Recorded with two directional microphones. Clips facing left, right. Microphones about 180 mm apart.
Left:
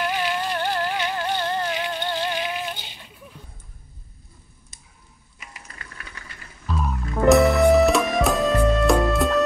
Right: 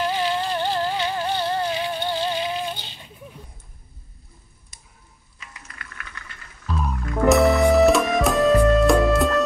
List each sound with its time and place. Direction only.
0.0 s music: 20° right (ahead or behind)
5.5 s frying: 30° left (ahead or behind)
6.6 s music: centre (ahead or behind)